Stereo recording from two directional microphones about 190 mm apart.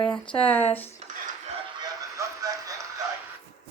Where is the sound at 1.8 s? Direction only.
15° right (ahead or behind).